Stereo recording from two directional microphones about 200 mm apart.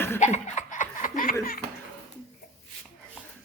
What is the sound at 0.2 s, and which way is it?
Laughter, 35° left (ahead or behind).